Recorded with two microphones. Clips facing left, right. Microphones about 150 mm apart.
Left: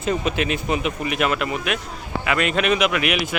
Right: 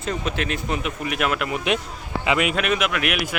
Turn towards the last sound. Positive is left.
turn(degrees=0)  # may be behind; listen again after turning